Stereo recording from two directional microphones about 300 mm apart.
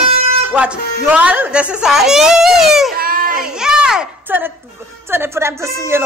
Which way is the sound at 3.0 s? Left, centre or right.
Right.